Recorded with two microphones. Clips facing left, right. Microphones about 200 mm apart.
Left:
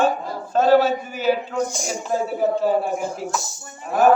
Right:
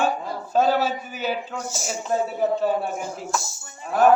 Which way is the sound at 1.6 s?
5° right (ahead or behind).